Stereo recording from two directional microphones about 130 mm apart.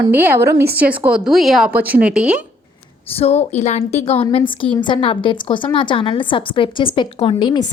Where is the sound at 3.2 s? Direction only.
55° left (ahead or behind).